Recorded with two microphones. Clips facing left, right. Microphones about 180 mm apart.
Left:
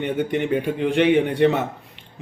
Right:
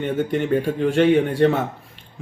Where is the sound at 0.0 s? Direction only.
15° left (ahead or behind).